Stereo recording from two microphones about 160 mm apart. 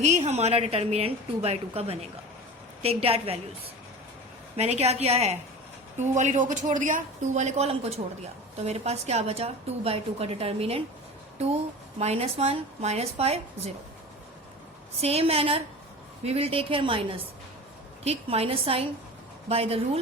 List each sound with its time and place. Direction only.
0.0 s a woman's voice: 45° right (ahead or behind)
4.5 s a woman's voice: 40° right (ahead or behind)
11.9 s a woman's voice: 40° right (ahead or behind)
15.0 s a woman's voice: 40° right (ahead or behind)
18.0 s a woman's voice: 40° right (ahead or behind)